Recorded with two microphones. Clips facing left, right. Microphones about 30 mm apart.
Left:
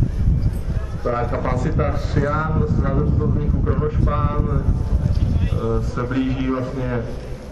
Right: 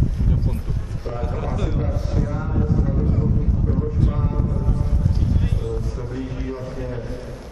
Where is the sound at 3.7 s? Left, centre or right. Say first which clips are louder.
Left 4 dB; left.